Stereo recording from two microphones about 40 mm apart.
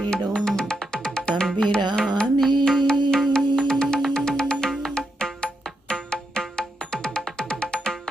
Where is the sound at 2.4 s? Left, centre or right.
Centre.